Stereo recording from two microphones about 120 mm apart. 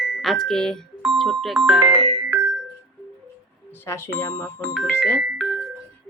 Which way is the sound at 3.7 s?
20° left (ahead or behind).